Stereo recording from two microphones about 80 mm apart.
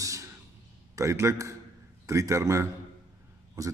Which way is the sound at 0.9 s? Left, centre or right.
Right.